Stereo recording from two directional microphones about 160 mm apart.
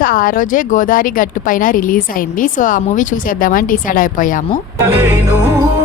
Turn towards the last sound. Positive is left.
turn(degrees=-15)  # may be behind; listen again after turning